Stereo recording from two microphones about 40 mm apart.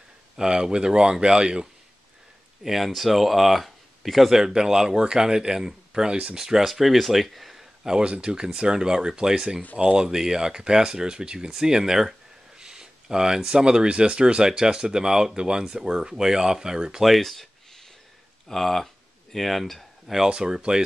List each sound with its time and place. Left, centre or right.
0.4 s speech: centre
2.6 s speech: centre
4.4 s speech: centre
8.0 s speech: right
10.0 s speech: centre
17.0 s a sound: centre
18.5 s speech: centre
20.2 s speech: right